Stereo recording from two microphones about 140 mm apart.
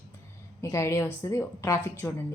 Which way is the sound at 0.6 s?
20° left (ahead or behind).